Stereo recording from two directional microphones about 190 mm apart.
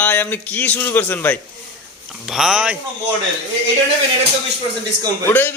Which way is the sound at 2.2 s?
5° right (ahead or behind).